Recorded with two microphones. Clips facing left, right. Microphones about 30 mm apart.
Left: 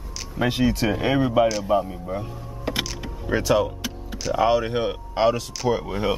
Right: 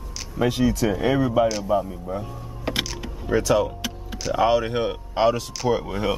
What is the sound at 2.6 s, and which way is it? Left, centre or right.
Power windows, centre.